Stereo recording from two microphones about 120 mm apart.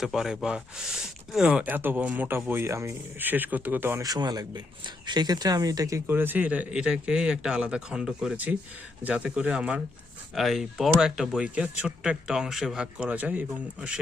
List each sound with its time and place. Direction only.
0.0 s speech: 5° right (ahead or behind)
4.0 s speech: 35° right (ahead or behind)
6.1 s speech: 15° right (ahead or behind)